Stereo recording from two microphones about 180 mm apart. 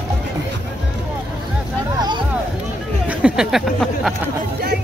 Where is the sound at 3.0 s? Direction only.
5° right (ahead or behind).